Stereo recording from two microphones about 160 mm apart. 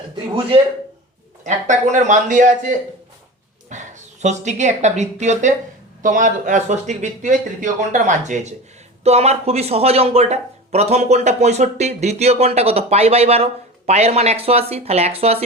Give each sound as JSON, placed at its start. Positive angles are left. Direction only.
{"t": 1.5, "sound": "a man's voice", "side_deg": -50}